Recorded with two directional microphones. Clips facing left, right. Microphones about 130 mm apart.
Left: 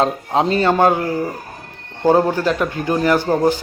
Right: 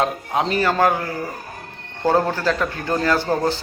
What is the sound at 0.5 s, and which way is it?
A man's voice, 25° left (ahead or behind).